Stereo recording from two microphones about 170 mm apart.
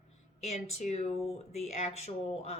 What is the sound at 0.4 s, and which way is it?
Speech, 40° left (ahead or behind).